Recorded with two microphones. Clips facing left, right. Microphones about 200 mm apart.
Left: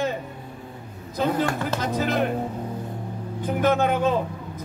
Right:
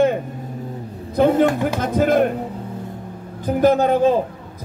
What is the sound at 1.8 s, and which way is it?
Speech, 50° right (ahead or behind).